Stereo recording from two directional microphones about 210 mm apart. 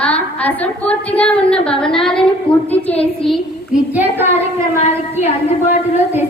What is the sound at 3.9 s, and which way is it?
Child singing, 10° right (ahead or behind).